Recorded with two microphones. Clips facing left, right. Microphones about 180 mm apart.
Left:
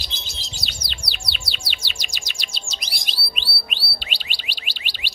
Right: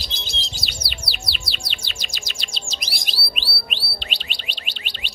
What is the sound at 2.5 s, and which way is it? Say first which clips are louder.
Bird: right 2 dB; centre (ahead or behind).